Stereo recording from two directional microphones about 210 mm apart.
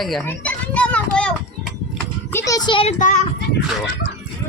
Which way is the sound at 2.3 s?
15° left (ahead or behind).